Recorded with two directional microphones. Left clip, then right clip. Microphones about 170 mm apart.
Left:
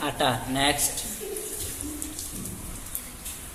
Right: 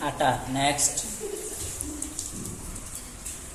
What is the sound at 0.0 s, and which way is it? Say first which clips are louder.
Speech: right 1 dB; 70° left (ahead or behind).